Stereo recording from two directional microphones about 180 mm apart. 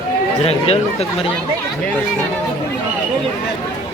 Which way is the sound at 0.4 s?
35° left (ahead or behind).